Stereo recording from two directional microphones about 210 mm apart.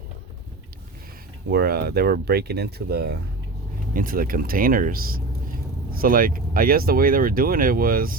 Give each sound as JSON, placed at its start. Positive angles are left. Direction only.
{"t": 1.5, "sound": "speech", "side_deg": -50}